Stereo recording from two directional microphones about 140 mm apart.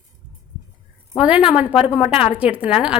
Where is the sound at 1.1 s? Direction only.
10° right (ahead or behind).